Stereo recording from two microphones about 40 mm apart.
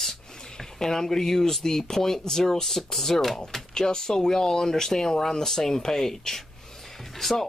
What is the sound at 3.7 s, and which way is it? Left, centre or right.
Speech, centre.